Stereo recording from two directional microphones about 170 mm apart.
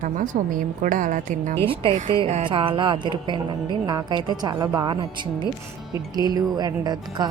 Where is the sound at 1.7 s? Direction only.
40° right (ahead or behind).